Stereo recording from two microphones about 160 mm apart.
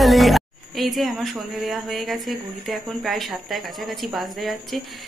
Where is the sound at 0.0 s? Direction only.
Centre (ahead or behind).